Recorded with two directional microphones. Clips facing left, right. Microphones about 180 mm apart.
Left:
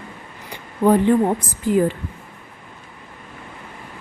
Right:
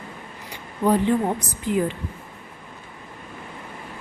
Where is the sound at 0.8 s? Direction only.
55° left (ahead or behind).